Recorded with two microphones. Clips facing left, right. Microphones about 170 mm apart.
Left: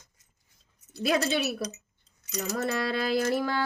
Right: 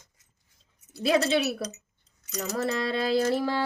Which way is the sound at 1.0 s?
25° right (ahead or behind).